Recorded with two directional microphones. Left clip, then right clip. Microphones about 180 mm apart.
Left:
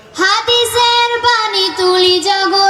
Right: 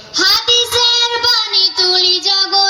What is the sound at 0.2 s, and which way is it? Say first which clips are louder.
Child singing: even; 40° left (ahead or behind).